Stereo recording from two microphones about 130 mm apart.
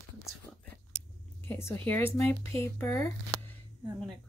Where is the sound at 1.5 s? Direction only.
20° left (ahead or behind).